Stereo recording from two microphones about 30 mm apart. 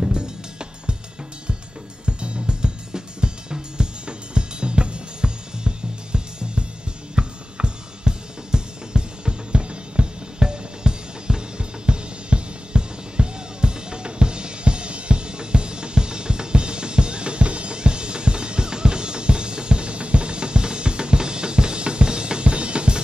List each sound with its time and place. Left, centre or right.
0.1 s music: right
2.0 s music: right
7.2 s drum kit: right